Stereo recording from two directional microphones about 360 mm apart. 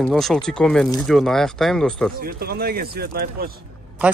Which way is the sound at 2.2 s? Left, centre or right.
Right.